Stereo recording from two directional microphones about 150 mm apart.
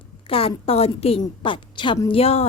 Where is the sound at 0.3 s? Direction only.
40° left (ahead or behind).